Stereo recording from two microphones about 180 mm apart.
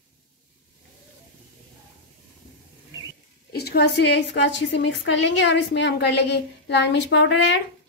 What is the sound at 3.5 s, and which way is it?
A woman's voice, 60° left (ahead or behind).